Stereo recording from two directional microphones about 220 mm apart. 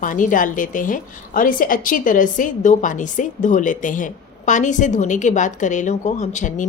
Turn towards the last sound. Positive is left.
turn(degrees=35)  # may be behind; listen again after turning